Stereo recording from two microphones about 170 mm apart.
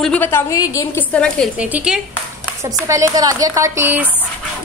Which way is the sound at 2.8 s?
20° right (ahead or behind).